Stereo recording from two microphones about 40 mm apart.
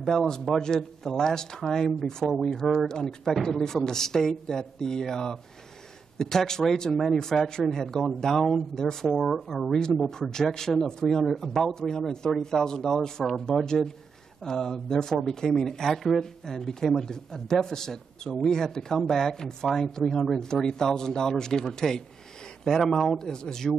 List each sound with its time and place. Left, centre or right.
0.3 s speech: centre
2.6 s speech: centre
2.9 s speech: centre
9.1 s speech: centre
9.7 s speech: centre